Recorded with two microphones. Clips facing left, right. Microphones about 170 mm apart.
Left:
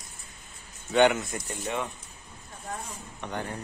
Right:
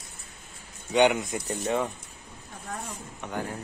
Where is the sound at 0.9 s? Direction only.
10° right (ahead or behind).